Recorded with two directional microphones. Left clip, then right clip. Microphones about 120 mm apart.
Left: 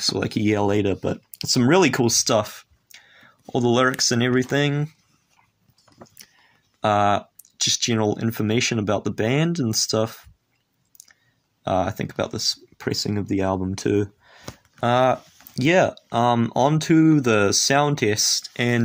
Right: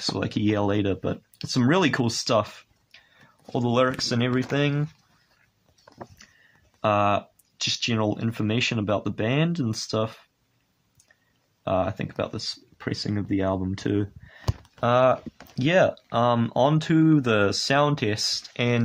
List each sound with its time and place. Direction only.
0.0 s speech: 25° left (ahead or behind)
6.8 s speech: 35° left (ahead or behind)
11.6 s speech: 35° left (ahead or behind); by 18.8 s 20° left (ahead or behind)